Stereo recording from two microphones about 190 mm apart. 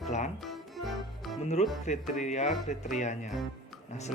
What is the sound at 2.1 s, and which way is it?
Speech, 40° left (ahead or behind).